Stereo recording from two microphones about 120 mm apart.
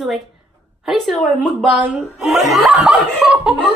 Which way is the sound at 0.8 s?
Centre (ahead or behind).